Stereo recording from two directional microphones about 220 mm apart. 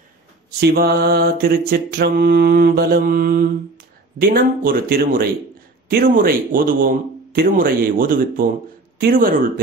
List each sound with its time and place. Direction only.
0.6 s mantra: 50° right (ahead or behind)
4.2 s speech: 40° right (ahead or behind)